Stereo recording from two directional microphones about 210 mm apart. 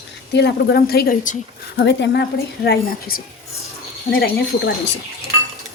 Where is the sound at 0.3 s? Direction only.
55° left (ahead or behind).